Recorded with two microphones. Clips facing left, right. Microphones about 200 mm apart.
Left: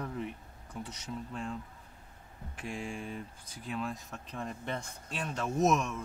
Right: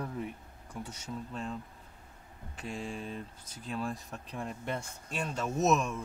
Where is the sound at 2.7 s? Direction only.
5° left (ahead or behind).